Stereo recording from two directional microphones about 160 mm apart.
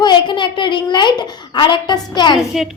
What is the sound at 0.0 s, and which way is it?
A woman's voice, 30° left (ahead or behind).